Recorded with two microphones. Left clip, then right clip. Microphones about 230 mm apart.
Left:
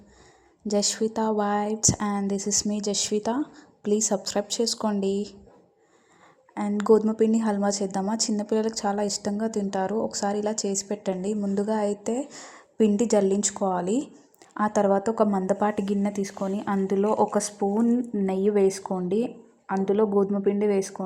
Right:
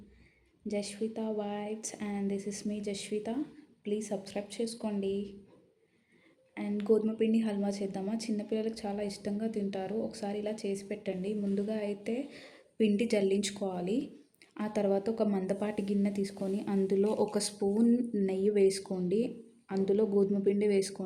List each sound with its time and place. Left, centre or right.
0.7 s a woman's voice: left
6.7 s a woman's voice: left; by 21.0 s centre